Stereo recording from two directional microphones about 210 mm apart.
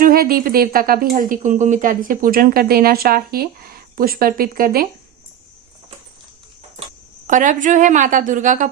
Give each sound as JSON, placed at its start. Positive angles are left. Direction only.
{"t": 0.0, "sound": "speech", "side_deg": -45}
{"t": 7.3, "sound": "a woman's voice", "side_deg": -35}